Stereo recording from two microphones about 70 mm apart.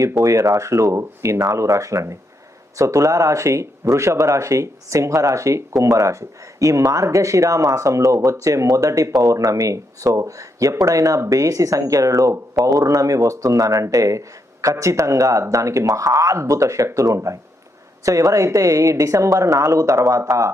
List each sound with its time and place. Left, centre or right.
0.2 s speech: right